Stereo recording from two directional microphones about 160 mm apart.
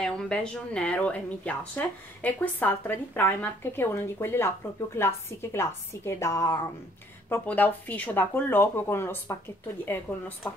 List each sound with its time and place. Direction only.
0.0 s a woman's voice: 5° left (ahead or behind)